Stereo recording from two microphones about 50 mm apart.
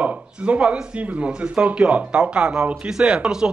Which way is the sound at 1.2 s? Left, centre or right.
Right.